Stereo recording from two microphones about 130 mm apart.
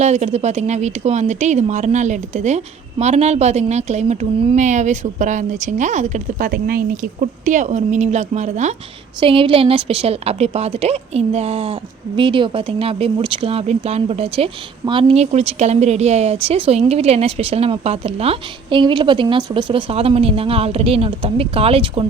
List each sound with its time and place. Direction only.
0.0 s speech: 60° right (ahead or behind)
6.9 s speech: 80° right; by 8.7 s 65° right (ahead or behind)
9.2 s a woman's voice: 45° right (ahead or behind)